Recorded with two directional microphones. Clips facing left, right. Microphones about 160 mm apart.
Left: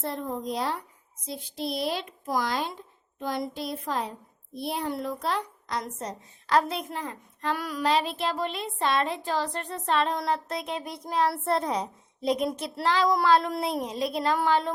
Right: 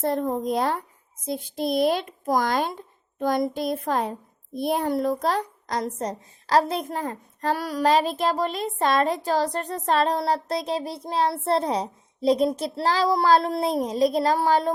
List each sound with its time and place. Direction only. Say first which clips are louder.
0.0 s a child's voice: right 7 dB; 45° right (ahead or behind)